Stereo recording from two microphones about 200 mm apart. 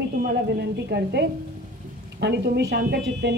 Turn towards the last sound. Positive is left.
turn(degrees=-55)  # may be behind; listen again after turning